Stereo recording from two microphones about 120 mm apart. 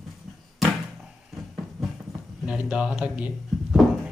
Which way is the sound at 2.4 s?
10° right (ahead or behind).